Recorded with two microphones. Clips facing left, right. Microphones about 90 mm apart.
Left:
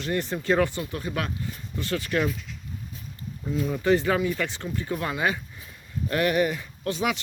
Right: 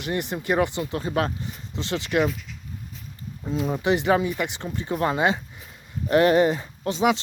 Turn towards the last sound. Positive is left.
turn(degrees=-25)  # may be behind; listen again after turning